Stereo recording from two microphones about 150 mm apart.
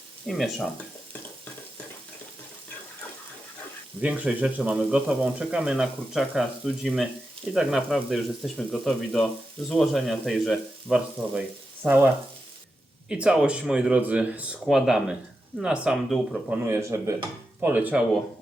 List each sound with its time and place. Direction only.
0.3 s speech: centre (ahead or behind)
4.0 s speech: 10° right (ahead or behind)
11.8 s speech: 10° right (ahead or behind)
16.5 s speech: 15° right (ahead or behind)